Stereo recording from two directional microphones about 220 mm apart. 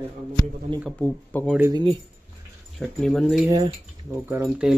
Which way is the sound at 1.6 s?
20° right (ahead or behind).